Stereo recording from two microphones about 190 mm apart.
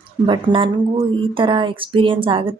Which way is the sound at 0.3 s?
25° right (ahead or behind).